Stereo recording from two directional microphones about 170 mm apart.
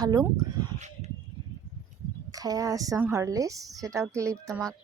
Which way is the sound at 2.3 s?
20° right (ahead or behind).